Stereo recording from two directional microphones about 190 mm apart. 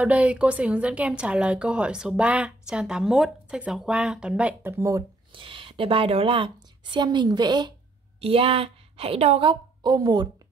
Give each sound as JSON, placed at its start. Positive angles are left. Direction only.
{"t": 0.0, "sound": "a woman's voice", "side_deg": -5}
{"t": 5.3, "sound": "a woman's voice", "side_deg": -25}